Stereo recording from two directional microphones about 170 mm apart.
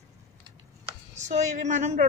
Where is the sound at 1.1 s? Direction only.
45° right (ahead or behind).